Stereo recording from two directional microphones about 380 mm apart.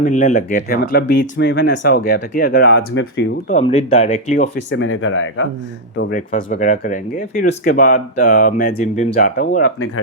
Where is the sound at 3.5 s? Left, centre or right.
Centre.